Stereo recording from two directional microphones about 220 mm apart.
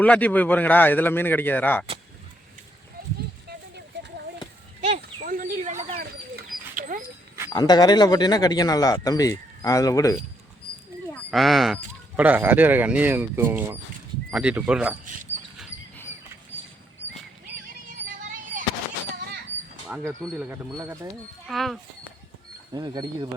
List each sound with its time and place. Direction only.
0.0 s speech: 5° left (ahead or behind)
3.4 s a sound: 50° right (ahead or behind)
4.8 s bird: 35° right (ahead or behind)
7.5 s speech: 20° left (ahead or behind)
11.1 s speech: centre (ahead or behind)
18.0 s a sound: 40° right (ahead or behind)
19.9 s speech: 5° right (ahead or behind)
21.4 s speech: centre (ahead or behind)
22.7 s speech: 20° right (ahead or behind)